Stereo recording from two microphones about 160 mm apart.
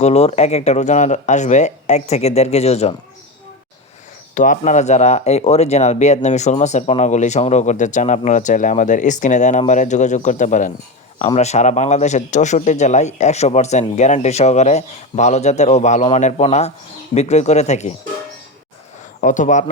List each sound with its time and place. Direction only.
0.0 s speech: 40° left (ahead or behind)
4.4 s speech: 50° left (ahead or behind)
19.2 s speech: 50° left (ahead or behind)